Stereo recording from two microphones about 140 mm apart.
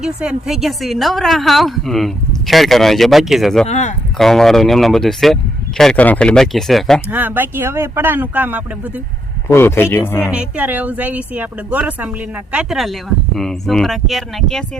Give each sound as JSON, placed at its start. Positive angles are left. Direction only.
{"t": 0.0, "sound": "a woman's voice", "side_deg": -5}
{"t": 3.7, "sound": "speech", "side_deg": 60}
{"t": 4.2, "sound": "a woman's voice", "side_deg": 0}
{"t": 7.1, "sound": "speech", "side_deg": -10}
{"t": 9.5, "sound": "speech", "side_deg": 15}
{"t": 10.3, "sound": "speech", "side_deg": -10}